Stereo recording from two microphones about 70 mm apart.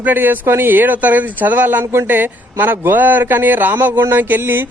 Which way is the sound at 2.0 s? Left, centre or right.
Right.